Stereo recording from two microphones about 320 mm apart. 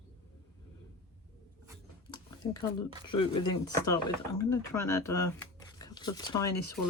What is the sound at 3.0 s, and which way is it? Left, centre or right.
Speech, centre.